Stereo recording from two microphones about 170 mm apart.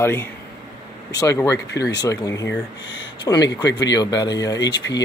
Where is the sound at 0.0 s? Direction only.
10° left (ahead or behind).